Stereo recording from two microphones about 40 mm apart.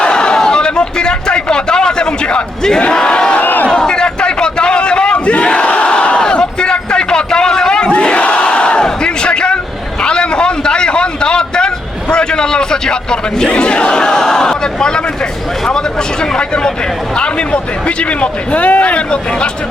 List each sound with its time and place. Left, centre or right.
0.0 s a sound: left
3.3 s crowd: left
3.7 s crowd: left
7.9 s battle cry: left
10.0 s a sound: left
17.2 s a man's voice: left